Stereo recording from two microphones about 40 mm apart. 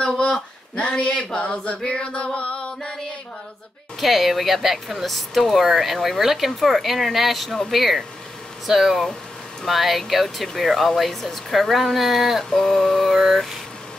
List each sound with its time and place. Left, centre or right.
0.7 s speech: left
1.9 s music: left
4.0 s speech: centre
12.4 s speech: centre